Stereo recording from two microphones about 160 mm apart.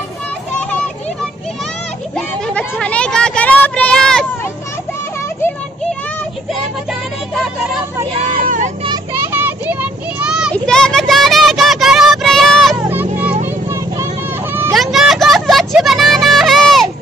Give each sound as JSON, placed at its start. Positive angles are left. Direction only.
{"t": 2.1, "sound": "a sound", "side_deg": 5}
{"t": 8.4, "sound": "vehicle", "side_deg": -60}
{"t": 8.8, "sound": "vehicle", "side_deg": -25}
{"t": 9.3, "sound": "a sound", "side_deg": -10}
{"t": 10.5, "sound": "child singing", "side_deg": 5}
{"t": 12.9, "sound": "vehicle", "side_deg": -10}
{"t": 14.7, "sound": "vehicle", "side_deg": 0}